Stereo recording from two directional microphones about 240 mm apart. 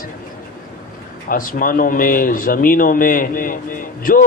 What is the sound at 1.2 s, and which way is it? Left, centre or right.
A man's voice, left.